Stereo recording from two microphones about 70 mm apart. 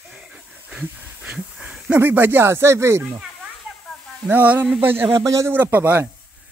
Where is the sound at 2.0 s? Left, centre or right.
Right.